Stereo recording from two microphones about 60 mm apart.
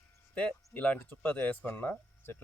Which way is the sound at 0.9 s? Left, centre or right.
Left.